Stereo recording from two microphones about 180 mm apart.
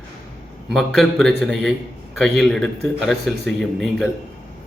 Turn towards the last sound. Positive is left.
turn(degrees=0)  # may be behind; listen again after turning